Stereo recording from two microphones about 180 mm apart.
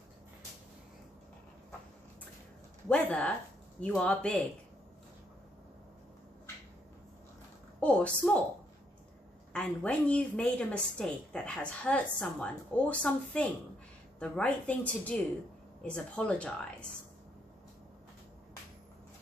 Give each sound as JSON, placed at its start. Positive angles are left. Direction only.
{"t": 2.9, "sound": "a woman's voice", "side_deg": 5}
{"t": 7.8, "sound": "a sound", "side_deg": 5}
{"t": 9.5, "sound": "a woman's voice", "side_deg": 5}